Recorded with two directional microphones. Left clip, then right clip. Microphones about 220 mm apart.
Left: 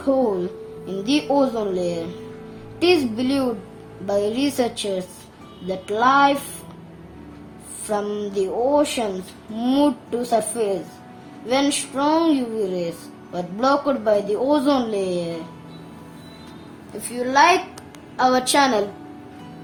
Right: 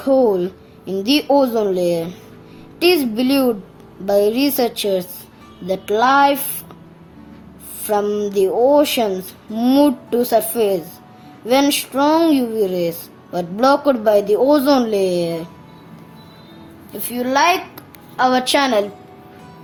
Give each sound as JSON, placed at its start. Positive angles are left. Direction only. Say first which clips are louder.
{"t": 0.1, "sound": "speech", "louder": "right 6 dB", "side_deg": -25}
{"t": 7.9, "sound": "speech", "louder": "right 6 dB", "side_deg": -25}
{"t": 17.1, "sound": "a child's voice", "louder": "even", "side_deg": -30}